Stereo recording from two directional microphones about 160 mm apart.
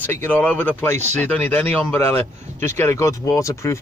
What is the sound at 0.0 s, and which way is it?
Speech, 10° left (ahead or behind).